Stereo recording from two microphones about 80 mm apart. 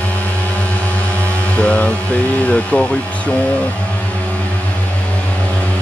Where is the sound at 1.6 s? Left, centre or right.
Centre.